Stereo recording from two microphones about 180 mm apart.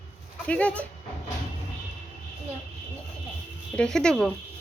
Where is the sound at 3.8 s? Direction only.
5° left (ahead or behind).